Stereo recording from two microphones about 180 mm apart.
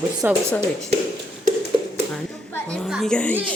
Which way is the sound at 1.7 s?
25° right (ahead or behind).